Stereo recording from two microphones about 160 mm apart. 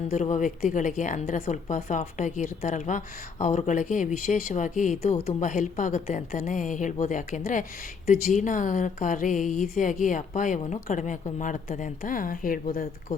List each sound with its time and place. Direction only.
0.1 s speech: 50° left (ahead or behind)